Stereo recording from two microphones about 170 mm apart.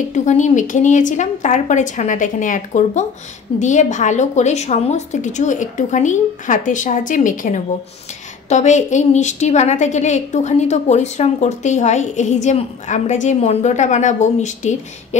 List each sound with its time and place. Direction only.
0.1 s a woman's voice: 45° left (ahead or behind)